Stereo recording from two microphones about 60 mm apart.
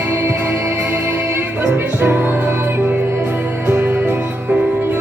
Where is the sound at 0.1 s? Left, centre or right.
Right.